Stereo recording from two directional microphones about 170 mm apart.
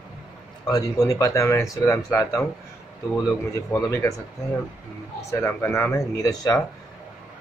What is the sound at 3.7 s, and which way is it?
Speech, 15° left (ahead or behind).